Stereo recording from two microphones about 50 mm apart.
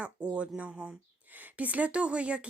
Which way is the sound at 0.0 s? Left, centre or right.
Right.